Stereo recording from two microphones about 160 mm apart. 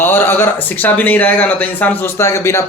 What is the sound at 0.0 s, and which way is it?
Speech, 15° left (ahead or behind).